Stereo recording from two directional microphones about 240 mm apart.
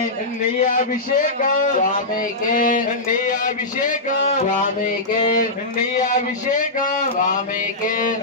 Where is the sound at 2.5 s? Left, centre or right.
Left.